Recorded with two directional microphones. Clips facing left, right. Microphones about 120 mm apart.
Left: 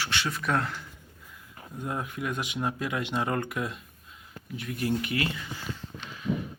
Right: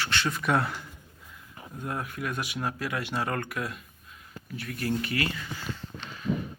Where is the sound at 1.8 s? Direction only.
15° left (ahead or behind).